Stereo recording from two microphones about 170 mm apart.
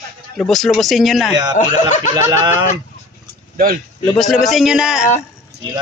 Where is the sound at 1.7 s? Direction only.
45° left (ahead or behind).